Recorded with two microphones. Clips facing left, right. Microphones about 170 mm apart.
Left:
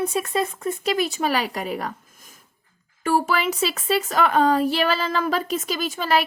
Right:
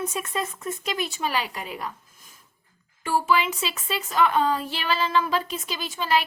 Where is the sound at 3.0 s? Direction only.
45° left (ahead or behind).